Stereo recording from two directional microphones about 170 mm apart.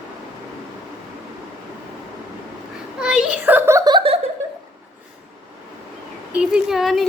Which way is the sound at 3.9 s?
30° right (ahead or behind).